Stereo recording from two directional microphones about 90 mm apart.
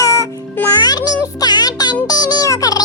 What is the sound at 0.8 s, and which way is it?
Music, 50° left (ahead or behind).